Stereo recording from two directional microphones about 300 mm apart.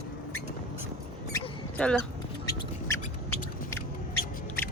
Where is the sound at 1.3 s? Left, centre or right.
Centre.